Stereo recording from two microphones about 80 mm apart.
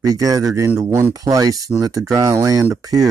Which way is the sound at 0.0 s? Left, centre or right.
Right.